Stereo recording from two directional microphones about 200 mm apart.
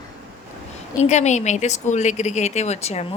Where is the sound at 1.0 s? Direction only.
35° left (ahead or behind).